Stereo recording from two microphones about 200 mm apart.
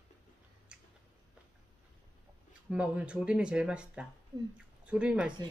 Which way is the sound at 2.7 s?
5° right (ahead or behind).